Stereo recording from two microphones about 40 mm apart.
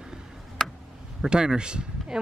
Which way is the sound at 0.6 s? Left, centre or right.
Centre.